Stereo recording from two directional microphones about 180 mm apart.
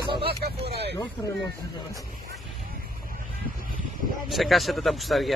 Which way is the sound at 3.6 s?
50° right (ahead or behind).